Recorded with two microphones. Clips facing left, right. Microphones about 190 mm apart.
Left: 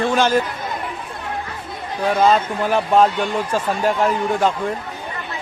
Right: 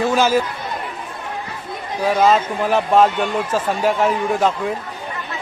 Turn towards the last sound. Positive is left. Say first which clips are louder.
# even
turn(degrees=0)  # may be behind; listen again after turning